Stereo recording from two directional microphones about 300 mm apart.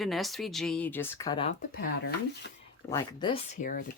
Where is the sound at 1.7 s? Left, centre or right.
Left.